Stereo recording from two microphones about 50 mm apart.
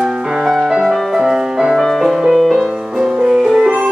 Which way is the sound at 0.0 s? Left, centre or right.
Centre.